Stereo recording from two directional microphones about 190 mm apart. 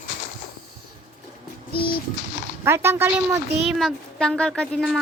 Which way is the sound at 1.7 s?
55° left (ahead or behind).